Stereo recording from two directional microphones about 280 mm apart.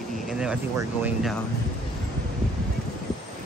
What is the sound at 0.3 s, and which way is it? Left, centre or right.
Speech, centre.